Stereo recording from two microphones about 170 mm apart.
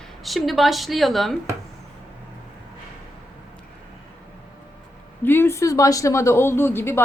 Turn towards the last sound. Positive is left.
turn(degrees=15)  # may be behind; listen again after turning